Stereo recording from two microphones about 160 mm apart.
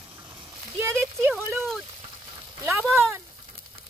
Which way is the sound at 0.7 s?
15° right (ahead or behind).